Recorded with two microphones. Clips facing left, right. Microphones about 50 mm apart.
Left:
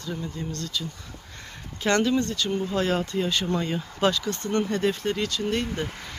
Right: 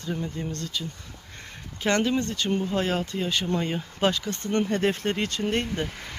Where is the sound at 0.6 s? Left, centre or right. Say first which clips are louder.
Left 1 dB; centre.